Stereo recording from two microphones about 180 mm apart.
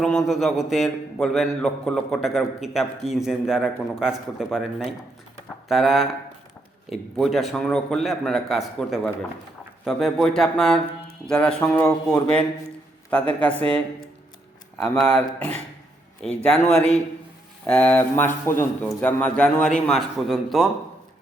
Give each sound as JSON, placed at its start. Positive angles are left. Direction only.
{"t": 0.0, "sound": "a man's voice", "side_deg": 0}
{"t": 14.9, "sound": "speech", "side_deg": 5}
{"t": 16.2, "sound": "speech", "side_deg": 5}
{"t": 17.7, "sound": "a man's voice", "side_deg": 10}